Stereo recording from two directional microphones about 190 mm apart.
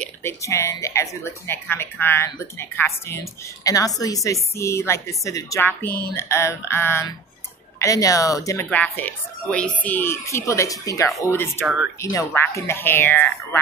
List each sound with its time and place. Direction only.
0.0 s speech: 15° left (ahead or behind)
11.6 s speech: 5° right (ahead or behind)
12.0 s speech: 15° left (ahead or behind)